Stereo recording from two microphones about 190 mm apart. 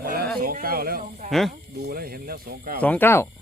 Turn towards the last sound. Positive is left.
turn(degrees=10)  # may be behind; listen again after turning